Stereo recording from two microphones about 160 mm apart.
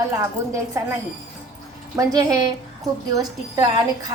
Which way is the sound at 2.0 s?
25° right (ahead or behind).